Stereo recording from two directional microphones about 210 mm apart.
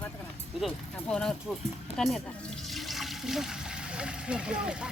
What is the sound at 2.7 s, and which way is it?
Water, centre (ahead or behind).